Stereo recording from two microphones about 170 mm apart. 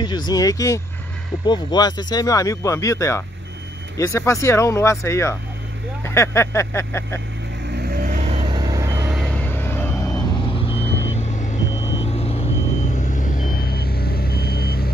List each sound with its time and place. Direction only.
0.0 s speech: 25° left (ahead or behind)
7.7 s vehicle: 65° right (ahead or behind); by 9.1 s 15° right (ahead or behind)
9.1 s vehicle: 5° left (ahead or behind); by 14.9 s 65° left (ahead or behind)